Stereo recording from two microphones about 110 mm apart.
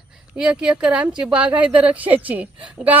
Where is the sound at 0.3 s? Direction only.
5° right (ahead or behind).